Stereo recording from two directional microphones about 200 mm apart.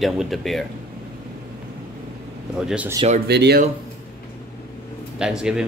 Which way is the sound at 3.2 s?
55° right (ahead or behind).